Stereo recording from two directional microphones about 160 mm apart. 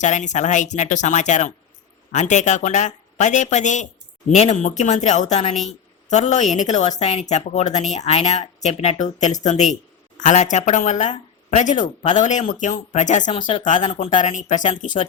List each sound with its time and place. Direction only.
0.0 s speech: 50° left (ahead or behind)
13.7 s speech: 30° left (ahead or behind)
14.0 s speech: 45° left (ahead or behind)